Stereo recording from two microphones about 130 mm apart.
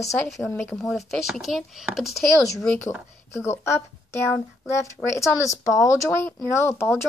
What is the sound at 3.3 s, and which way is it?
Speech, 20° left (ahead or behind).